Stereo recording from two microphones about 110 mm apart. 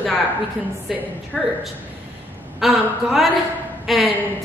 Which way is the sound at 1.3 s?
5° right (ahead or behind).